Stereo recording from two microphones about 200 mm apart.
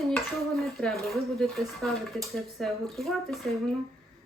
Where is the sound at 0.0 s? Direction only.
Centre (ahead or behind).